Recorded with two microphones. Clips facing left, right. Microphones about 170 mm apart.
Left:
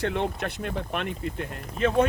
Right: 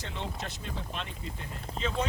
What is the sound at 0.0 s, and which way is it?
Speech, 60° left (ahead or behind).